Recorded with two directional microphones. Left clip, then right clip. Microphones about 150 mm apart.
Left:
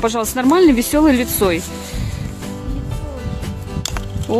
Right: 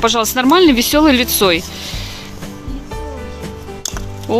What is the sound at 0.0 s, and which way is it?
Speech, 10° left (ahead or behind).